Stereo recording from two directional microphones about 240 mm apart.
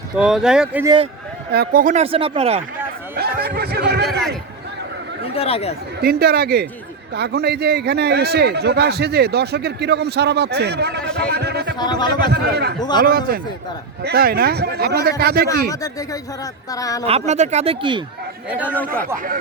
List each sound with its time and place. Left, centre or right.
0.2 s speech: centre
1.5 s speech: right
3.2 s snicker: right
5.2 s speech: left
6.0 s a man's voice: right
11.8 s speech: centre
12.3 s a man's voice: right
15.7 s speech: centre
17.1 s speech: right
18.6 s speech: centre